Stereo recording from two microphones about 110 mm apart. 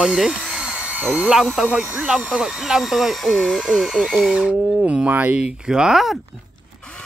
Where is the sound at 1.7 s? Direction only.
5° right (ahead or behind).